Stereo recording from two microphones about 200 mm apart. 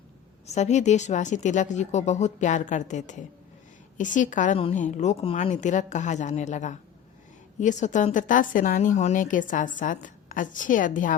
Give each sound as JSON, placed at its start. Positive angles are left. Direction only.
{"t": 0.4, "sound": "a woman's voice", "side_deg": 35}